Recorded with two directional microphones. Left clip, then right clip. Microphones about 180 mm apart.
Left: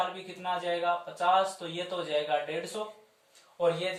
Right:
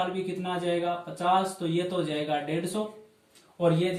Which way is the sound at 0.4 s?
10° left (ahead or behind).